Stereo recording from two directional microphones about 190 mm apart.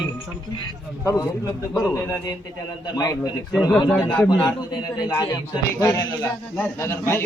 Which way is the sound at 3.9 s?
5° left (ahead or behind).